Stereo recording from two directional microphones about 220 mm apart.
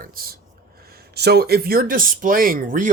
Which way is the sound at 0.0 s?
40° right (ahead or behind).